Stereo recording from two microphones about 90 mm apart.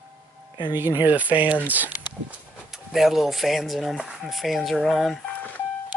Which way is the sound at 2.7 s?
5° right (ahead or behind).